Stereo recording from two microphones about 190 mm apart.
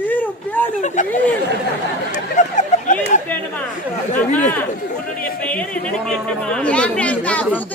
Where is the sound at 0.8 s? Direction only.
40° left (ahead or behind).